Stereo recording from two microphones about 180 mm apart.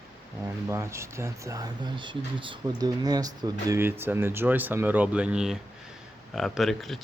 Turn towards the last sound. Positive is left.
turn(degrees=0)  # may be behind; listen again after turning